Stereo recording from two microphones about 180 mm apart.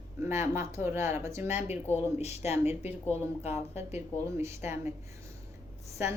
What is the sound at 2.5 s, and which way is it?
A woman's voice, 10° right (ahead or behind).